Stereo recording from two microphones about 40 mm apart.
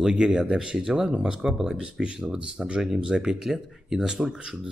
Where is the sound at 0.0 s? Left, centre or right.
Centre.